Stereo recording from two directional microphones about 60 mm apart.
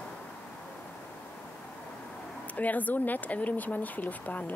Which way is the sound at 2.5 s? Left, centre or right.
Left.